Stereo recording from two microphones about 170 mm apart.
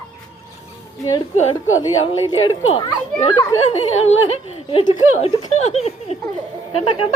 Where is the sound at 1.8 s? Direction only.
30° left (ahead or behind).